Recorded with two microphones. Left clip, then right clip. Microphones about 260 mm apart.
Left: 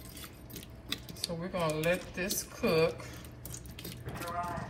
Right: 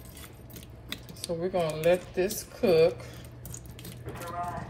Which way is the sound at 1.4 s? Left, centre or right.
Centre.